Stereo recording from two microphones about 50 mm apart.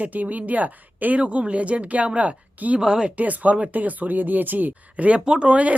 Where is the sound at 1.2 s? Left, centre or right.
Right.